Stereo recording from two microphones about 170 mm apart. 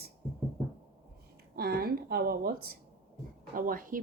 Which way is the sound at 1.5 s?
65° right (ahead or behind).